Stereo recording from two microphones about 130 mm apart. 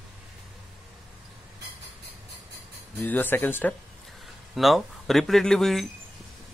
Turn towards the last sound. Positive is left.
turn(degrees=5)  # may be behind; listen again after turning